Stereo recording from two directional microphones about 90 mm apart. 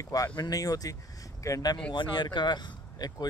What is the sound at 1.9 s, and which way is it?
Speech, 60° left (ahead or behind).